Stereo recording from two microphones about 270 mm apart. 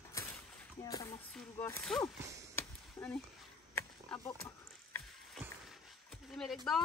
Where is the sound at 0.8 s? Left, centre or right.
Centre.